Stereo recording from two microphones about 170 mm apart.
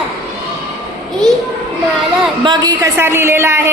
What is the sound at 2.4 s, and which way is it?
A woman's voice, 25° right (ahead or behind).